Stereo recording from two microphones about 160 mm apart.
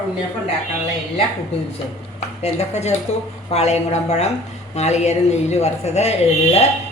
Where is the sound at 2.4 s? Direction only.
40° left (ahead or behind).